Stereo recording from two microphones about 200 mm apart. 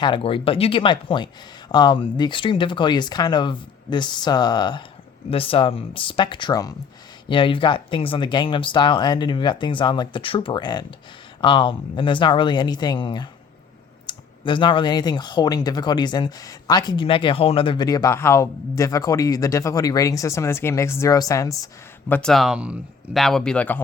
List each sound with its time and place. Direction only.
0.0 s speech: 25° left (ahead or behind)
22.1 s speech: 5° left (ahead or behind)